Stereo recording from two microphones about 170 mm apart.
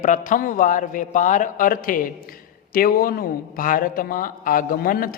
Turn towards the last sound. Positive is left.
turn(degrees=55)  # may be behind; listen again after turning